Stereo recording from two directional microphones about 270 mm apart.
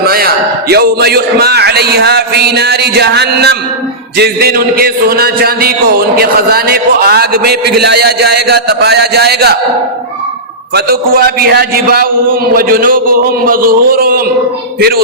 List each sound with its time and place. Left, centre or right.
0.0 s a sound: right
0.7 s a man's voice: right
10.8 s a man's voice: right